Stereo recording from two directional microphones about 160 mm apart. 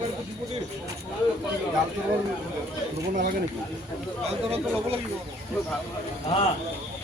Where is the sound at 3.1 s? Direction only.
60° right (ahead or behind).